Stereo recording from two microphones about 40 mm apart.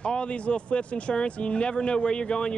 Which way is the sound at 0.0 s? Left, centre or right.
Left.